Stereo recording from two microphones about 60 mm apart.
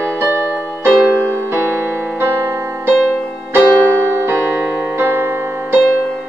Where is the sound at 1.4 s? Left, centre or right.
Right.